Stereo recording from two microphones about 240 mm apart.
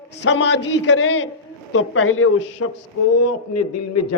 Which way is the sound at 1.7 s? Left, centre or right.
Left.